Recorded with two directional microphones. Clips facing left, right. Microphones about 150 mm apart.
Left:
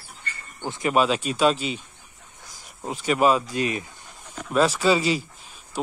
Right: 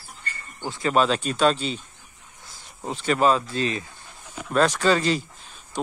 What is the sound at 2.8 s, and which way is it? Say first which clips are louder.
Speech: even; 10° left (ahead or behind).